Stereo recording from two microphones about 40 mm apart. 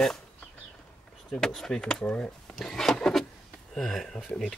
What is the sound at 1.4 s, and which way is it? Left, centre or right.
Speech, centre.